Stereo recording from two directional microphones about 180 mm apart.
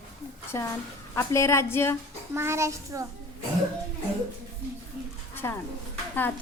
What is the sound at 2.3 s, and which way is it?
Speech, 15° right (ahead or behind).